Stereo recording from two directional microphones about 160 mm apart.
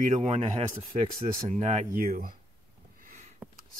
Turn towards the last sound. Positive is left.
turn(degrees=-5)  # may be behind; listen again after turning